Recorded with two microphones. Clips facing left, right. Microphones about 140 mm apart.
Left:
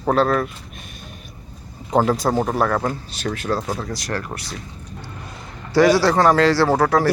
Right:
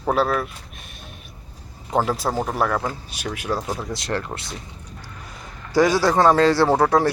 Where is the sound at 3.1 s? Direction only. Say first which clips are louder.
Left 3 dB; 10° right (ahead or behind).